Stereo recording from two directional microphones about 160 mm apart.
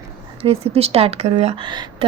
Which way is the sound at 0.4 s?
40° right (ahead or behind).